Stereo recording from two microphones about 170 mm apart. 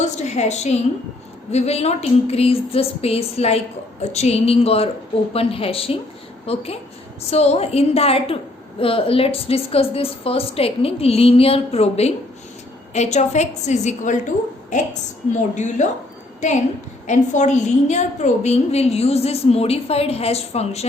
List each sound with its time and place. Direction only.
0.0 s a woman's voice: 40° left (ahead or behind)
17.1 s a woman's voice: 45° left (ahead or behind)